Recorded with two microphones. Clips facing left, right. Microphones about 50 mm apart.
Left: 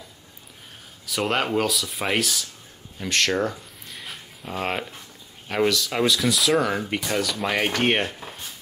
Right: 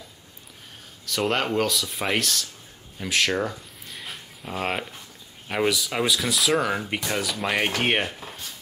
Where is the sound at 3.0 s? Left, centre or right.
Centre.